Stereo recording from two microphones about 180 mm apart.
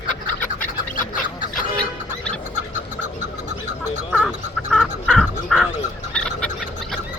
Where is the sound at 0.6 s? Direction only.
50° left (ahead or behind).